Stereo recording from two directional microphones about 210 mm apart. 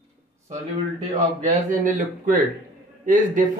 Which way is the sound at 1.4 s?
35° right (ahead or behind).